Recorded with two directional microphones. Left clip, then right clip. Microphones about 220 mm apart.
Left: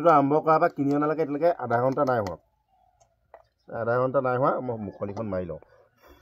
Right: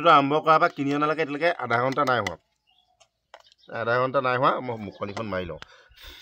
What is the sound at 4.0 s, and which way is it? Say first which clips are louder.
Speech: right 1 dB; 25° right (ahead or behind).